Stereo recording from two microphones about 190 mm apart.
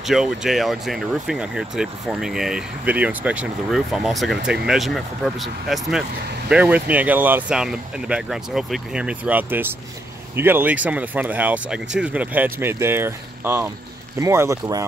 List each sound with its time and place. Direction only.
0.0 s speech: centre (ahead or behind)